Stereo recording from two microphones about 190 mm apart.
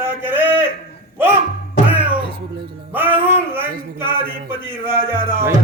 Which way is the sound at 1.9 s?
10° right (ahead or behind).